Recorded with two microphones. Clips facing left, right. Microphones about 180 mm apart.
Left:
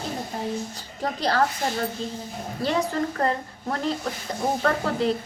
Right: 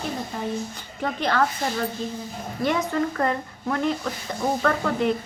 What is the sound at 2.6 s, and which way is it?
A woman's voice, 35° left (ahead or behind).